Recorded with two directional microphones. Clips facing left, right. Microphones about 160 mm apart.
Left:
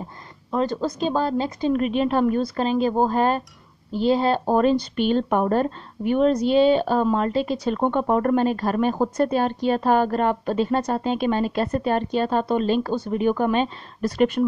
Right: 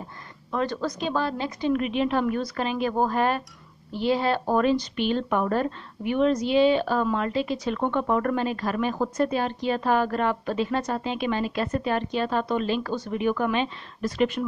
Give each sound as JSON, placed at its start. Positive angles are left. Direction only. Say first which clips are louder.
{"t": 0.5, "sound": "speech", "louder": "left 4 dB", "side_deg": 30}